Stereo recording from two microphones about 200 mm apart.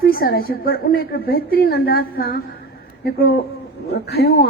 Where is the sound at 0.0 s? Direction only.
50° left (ahead or behind).